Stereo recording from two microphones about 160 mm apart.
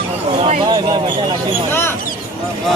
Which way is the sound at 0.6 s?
30° right (ahead or behind).